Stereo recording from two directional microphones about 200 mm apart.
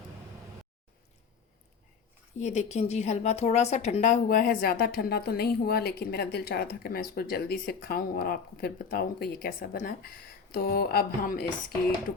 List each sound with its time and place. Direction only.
2.4 s a woman's voice: 35° left (ahead or behind)